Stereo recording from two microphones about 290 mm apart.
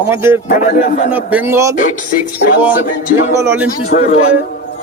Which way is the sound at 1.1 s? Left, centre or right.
Centre.